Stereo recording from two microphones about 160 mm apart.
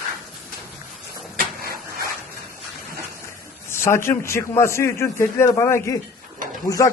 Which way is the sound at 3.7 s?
15° left (ahead or behind).